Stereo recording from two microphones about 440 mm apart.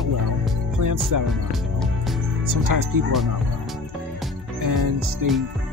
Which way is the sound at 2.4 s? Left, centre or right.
Right.